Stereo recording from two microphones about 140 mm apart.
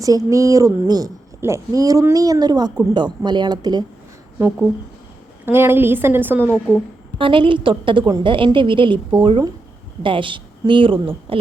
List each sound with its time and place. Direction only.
0.0 s a woman's voice: 25° right (ahead or behind)
5.5 s a woman's voice: 15° right (ahead or behind)
6.5 s a woman's voice: 15° left (ahead or behind)
7.2 s a woman's voice: 35° right (ahead or behind)